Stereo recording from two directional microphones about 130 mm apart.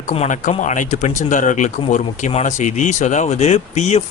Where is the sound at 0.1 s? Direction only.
70° left (ahead or behind).